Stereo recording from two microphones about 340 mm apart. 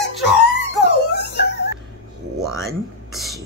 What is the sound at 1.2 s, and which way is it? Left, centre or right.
Wail, left.